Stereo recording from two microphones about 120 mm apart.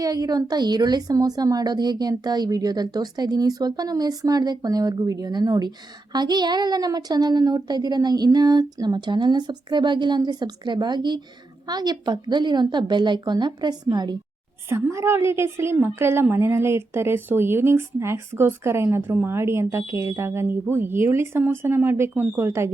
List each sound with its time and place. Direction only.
0.0 s a woman's voice: 35° right (ahead or behind)
14.7 s a woman's voice: 25° right (ahead or behind)